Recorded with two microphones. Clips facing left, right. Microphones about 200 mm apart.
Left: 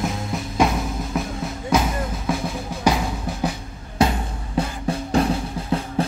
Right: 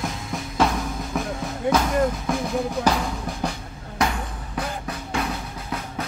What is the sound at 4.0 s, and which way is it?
Music, 25° left (ahead or behind).